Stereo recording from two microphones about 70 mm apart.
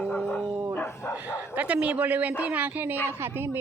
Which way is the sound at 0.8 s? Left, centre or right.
Left.